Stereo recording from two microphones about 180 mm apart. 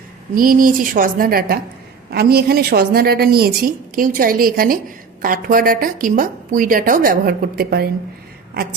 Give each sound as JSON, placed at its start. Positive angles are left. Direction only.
{"t": 0.3, "sound": "a woman's voice", "side_deg": -50}